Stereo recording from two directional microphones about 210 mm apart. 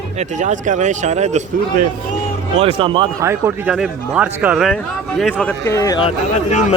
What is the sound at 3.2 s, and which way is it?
Speech, 15° right (ahead or behind).